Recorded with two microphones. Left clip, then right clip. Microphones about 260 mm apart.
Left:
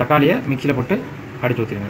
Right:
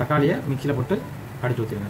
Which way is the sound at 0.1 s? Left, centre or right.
Centre.